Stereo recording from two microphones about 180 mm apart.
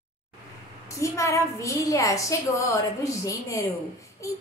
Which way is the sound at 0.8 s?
15° left (ahead or behind).